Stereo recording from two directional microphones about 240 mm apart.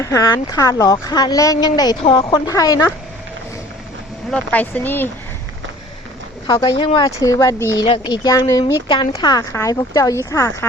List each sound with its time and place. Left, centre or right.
0.0 s speech: centre
4.3 s speech: centre
6.5 s speech: centre